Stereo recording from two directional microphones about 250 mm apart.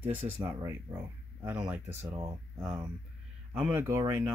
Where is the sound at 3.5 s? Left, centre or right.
Centre.